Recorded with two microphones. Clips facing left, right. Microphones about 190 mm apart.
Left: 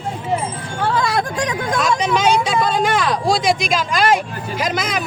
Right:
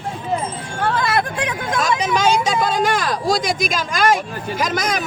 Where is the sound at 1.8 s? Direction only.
45° right (ahead or behind).